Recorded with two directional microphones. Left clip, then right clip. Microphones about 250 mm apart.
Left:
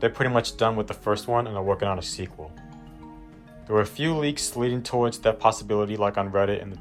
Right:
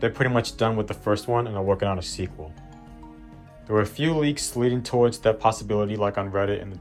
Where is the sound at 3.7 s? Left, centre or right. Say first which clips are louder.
Even; centre.